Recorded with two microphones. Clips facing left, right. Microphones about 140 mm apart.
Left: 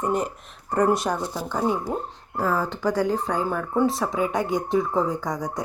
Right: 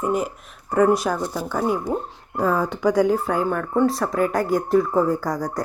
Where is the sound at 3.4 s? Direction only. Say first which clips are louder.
Right 2 dB; 5° left (ahead or behind).